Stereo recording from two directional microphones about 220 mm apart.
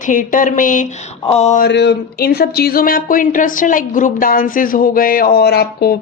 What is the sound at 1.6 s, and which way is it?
Speech, 50° left (ahead or behind).